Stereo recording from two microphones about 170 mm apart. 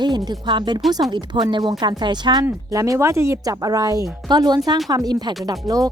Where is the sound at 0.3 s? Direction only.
25° right (ahead or behind).